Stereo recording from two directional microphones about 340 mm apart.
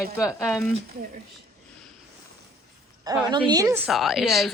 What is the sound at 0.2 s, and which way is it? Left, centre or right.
Speech, centre.